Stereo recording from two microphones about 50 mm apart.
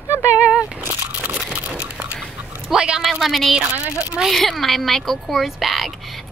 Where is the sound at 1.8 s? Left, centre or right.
Right.